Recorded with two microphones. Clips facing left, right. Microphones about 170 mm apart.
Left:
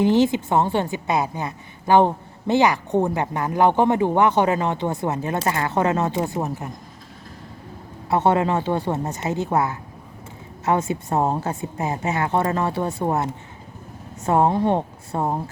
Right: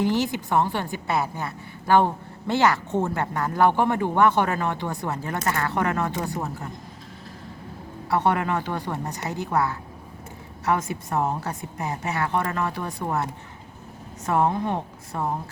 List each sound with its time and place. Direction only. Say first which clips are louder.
0.0 s a woman's voice: left 6 dB; 20° left (ahead or behind)
8.1 s a woman's voice: left 4 dB; 25° left (ahead or behind)